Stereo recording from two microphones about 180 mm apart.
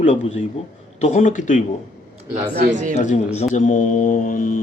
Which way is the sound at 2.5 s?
50° right (ahead or behind).